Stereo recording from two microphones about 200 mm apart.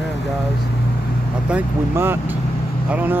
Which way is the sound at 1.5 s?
10° right (ahead or behind).